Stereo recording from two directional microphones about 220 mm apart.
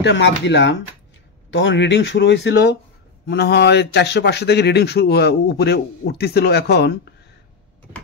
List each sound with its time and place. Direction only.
0.0 s speech: 55° left (ahead or behind)